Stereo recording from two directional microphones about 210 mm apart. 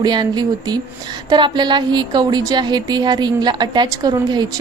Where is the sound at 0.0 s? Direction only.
20° right (ahead or behind).